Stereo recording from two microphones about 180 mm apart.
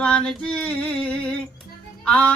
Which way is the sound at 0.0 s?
5° left (ahead or behind).